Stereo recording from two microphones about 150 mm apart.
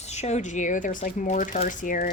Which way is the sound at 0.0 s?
50° left (ahead or behind).